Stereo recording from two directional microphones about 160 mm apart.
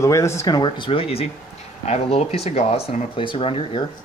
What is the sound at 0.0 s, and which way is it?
Speech, 20° left (ahead or behind).